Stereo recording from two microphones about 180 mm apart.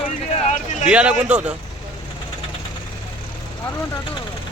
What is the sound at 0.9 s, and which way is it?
Speech, 5° right (ahead or behind).